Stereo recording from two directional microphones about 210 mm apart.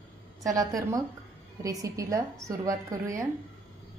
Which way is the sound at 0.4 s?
15° right (ahead or behind).